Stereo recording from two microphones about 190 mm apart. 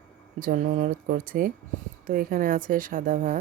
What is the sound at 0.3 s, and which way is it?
Speech, 45° right (ahead or behind).